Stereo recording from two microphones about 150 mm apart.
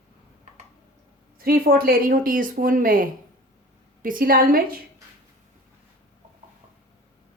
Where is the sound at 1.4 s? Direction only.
75° right (ahead or behind).